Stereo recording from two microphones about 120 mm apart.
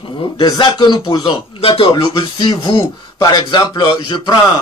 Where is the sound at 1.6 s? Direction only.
50° left (ahead or behind).